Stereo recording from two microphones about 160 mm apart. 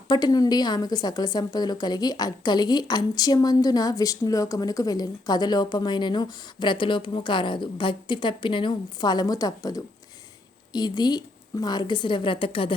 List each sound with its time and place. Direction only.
0.1 s a woman's voice: 25° left (ahead or behind)